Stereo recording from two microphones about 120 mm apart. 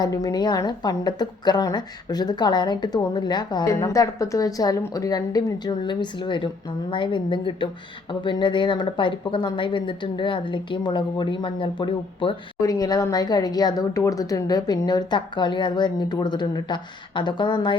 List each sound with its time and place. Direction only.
0.0 s a woman's voice: 30° left (ahead or behind)
12.6 s a woman's voice: 30° left (ahead or behind)